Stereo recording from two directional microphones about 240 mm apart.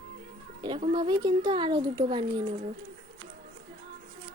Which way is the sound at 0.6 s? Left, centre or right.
Right.